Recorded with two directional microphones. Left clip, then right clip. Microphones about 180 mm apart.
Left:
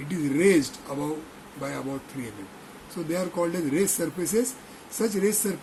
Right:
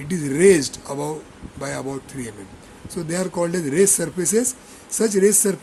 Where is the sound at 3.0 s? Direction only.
60° right (ahead or behind).